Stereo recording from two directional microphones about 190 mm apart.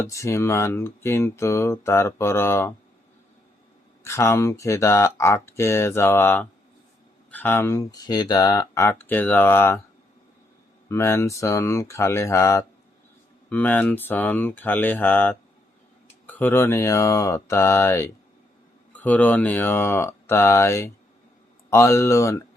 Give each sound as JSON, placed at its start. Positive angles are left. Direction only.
{"t": 0.1, "sound": "speech", "side_deg": 15}
{"t": 4.0, "sound": "speech", "side_deg": 15}
{"t": 10.8, "sound": "speech", "side_deg": 15}